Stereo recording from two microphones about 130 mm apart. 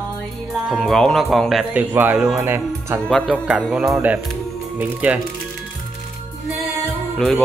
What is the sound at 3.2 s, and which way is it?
Music, 10° right (ahead or behind).